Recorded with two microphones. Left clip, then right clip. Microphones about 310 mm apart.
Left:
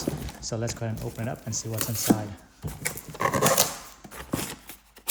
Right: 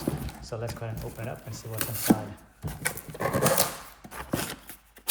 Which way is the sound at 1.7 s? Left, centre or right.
Centre.